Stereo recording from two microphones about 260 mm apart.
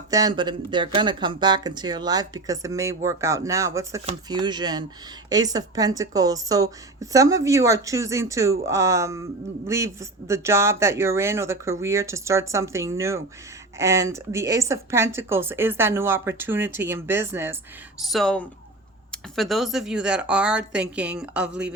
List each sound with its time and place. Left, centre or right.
0.1 s speech: centre